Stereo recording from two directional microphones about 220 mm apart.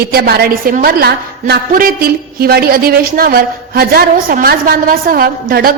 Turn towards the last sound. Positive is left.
turn(degrees=-40)  # may be behind; listen again after turning